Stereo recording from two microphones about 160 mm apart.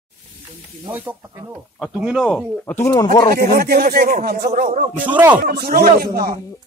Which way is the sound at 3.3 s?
75° right (ahead or behind).